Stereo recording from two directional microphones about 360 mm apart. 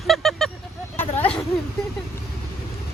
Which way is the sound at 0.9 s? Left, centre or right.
Centre.